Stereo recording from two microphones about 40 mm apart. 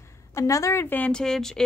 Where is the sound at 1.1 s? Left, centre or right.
Centre.